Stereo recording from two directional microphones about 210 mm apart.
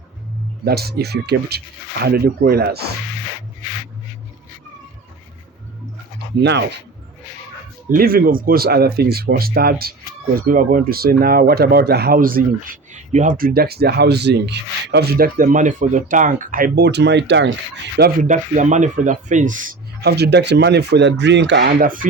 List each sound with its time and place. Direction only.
0.6 s speech: 50° right (ahead or behind)
6.4 s speech: 55° right (ahead or behind)
7.9 s speech: 45° right (ahead or behind)
18.3 s speech: 35° right (ahead or behind)
20.0 s speech: 50° right (ahead or behind)